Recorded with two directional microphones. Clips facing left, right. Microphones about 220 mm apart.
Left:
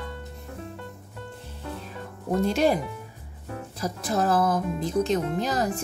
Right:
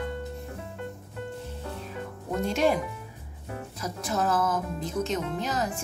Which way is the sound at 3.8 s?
35° left (ahead or behind).